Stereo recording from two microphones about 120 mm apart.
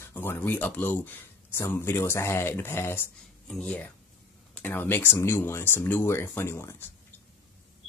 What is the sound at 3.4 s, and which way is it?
Speech, 5° left (ahead or behind).